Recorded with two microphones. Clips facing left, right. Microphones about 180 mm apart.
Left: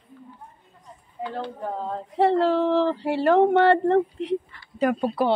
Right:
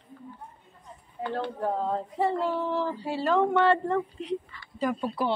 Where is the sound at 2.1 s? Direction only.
80° left.